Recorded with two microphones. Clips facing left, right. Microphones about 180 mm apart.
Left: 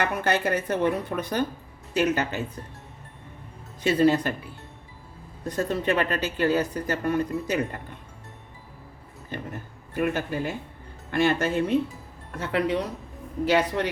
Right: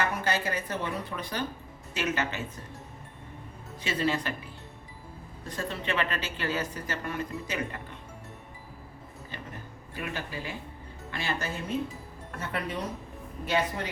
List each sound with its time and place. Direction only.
0.0 s speech: 60° left (ahead or behind)
1.9 s speech: 40° left (ahead or behind)
3.8 s speech: 45° left (ahead or behind)
5.5 s speech: 45° left (ahead or behind)
9.9 s speech: 55° left (ahead or behind)
12.4 s speech: 80° left